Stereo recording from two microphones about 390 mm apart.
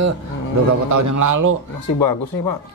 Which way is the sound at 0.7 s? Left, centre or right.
Right.